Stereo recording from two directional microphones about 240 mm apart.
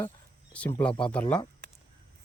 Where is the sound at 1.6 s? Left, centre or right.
Right.